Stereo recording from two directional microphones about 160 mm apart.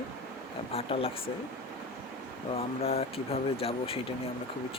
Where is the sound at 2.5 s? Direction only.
40° left (ahead or behind).